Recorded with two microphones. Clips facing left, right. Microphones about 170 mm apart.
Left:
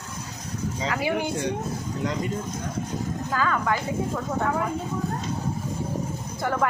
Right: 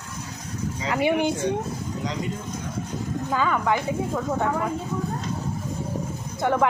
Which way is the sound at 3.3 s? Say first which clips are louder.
Right 2 dB; 15° right (ahead or behind).